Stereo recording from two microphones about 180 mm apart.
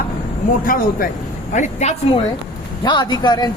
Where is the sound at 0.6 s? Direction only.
50° left (ahead or behind).